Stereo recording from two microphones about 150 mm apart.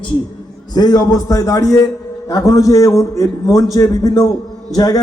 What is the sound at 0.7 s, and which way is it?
A man's voice, 25° left (ahead or behind).